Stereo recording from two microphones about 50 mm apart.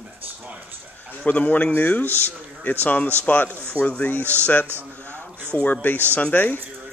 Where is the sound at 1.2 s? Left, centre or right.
Left.